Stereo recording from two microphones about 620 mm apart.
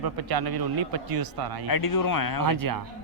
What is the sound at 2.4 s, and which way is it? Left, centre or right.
Speech, right.